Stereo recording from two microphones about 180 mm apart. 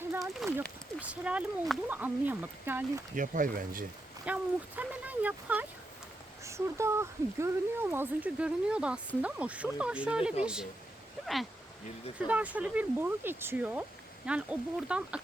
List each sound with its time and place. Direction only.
0.4 s a sound: centre (ahead or behind)
0.9 s speech: 10° right (ahead or behind)
3.2 s speech: 45° right (ahead or behind)
4.3 s speech: 10° right (ahead or behind)
12.2 s speech: 10° right (ahead or behind)